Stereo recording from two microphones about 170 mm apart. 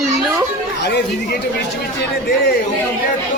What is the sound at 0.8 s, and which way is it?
Speech, 85° left.